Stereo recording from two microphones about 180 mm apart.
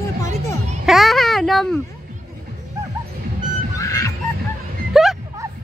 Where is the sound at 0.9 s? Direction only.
Centre (ahead or behind).